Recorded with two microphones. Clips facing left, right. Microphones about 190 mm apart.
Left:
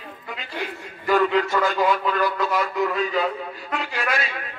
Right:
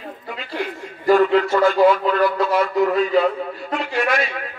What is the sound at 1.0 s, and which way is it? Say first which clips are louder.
A man's voice: right 5 dB; 40° right (ahead or behind).